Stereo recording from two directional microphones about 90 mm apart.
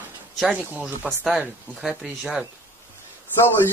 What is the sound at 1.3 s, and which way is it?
Speech, 5° right (ahead or behind).